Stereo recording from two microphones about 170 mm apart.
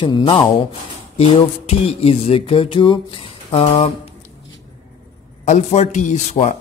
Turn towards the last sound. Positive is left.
turn(degrees=45)  # may be behind; listen again after turning